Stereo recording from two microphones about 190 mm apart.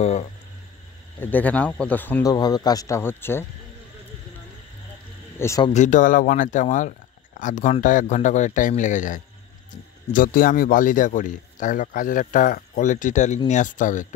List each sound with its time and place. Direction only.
0.0 s speech: 35° left (ahead or behind)
1.2 s speech: 10° left (ahead or behind)
2.3 s speech: 20° left (ahead or behind)
5.4 s speech: 15° left (ahead or behind)
5.7 s a man's voice: 40° left (ahead or behind)